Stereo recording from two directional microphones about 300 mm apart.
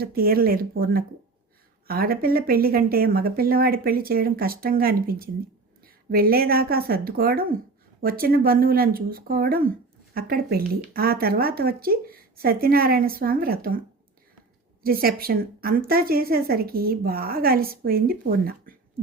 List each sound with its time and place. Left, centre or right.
0.0 s speech: right
14.8 s speech: right